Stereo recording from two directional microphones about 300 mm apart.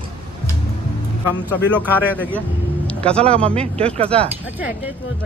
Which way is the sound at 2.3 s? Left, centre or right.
Centre.